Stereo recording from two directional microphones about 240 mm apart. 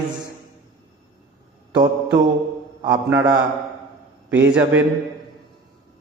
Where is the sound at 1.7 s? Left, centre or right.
Centre.